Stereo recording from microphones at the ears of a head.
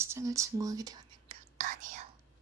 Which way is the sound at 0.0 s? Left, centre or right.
Right.